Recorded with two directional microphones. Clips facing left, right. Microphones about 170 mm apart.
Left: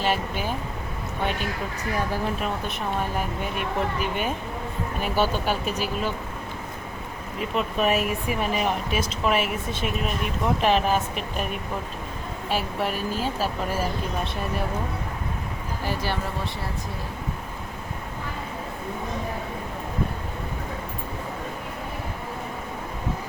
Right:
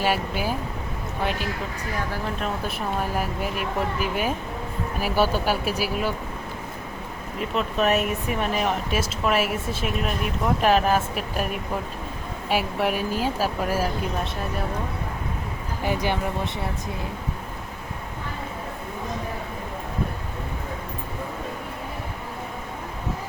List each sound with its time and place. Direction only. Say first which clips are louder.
0.0 s speech: right 1 dB; 5° right (ahead or behind)
2.6 s speech: right 1 dB; 5° right (ahead or behind)
7.5 s speech: right 1 dB; centre (ahead or behind)
12.5 s speech: right 3 dB; 10° right (ahead or behind)
15.8 s speech: right 4 dB; 15° right (ahead or behind)